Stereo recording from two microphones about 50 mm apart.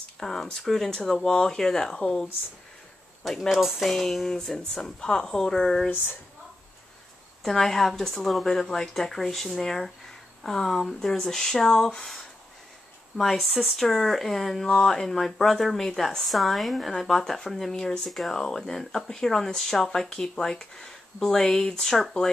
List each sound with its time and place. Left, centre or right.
0.2 s a woman's voice: centre
3.3 s a woman's voice: centre
5.9 s speech: left
7.4 s a woman's voice: centre
13.2 s a woman's voice: centre